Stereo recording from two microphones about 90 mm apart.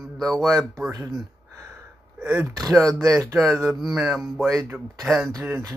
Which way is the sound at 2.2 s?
15° right (ahead or behind).